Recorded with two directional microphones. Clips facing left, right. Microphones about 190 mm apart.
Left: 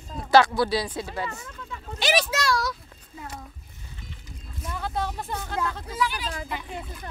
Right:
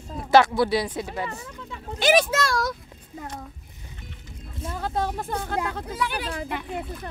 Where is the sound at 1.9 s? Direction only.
50° right (ahead or behind).